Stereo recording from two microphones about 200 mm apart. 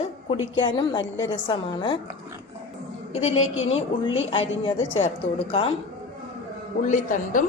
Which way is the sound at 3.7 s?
25° left (ahead or behind).